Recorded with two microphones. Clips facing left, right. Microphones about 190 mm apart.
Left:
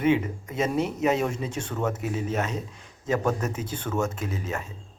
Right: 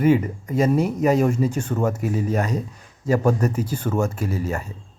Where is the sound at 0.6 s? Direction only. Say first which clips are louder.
Right 5 dB; 10° right (ahead or behind).